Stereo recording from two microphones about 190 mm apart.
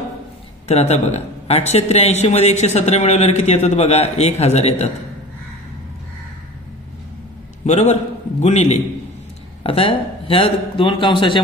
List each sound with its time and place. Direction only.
0.7 s speech: 35° left (ahead or behind)
7.6 s a man's voice: 35° left (ahead or behind)